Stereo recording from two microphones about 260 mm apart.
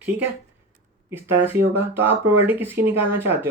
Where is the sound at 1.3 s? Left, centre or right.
Centre.